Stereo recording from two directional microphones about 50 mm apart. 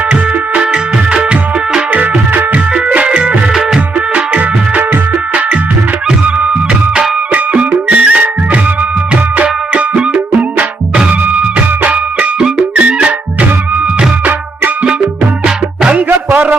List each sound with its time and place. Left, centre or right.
0.1 s music: right
1.9 s music: right
2.7 s music: right
7.3 s music: right
9.4 s music: right
15.9 s music: right
16.3 s a sound: right